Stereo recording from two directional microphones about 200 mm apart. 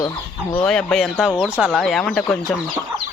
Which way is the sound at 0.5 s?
5° left (ahead or behind).